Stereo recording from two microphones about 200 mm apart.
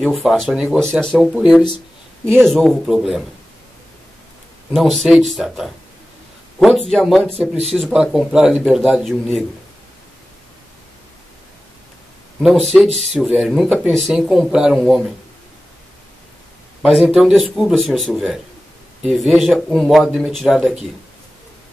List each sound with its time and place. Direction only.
0.0 s speech: centre (ahead or behind)
4.7 s speech: centre (ahead or behind)
6.9 s speech: centre (ahead or behind)
7.2 s speech: 30° right (ahead or behind)
7.7 s speech: centre (ahead or behind)
12.4 s speech: centre (ahead or behind)
16.8 s speech: centre (ahead or behind)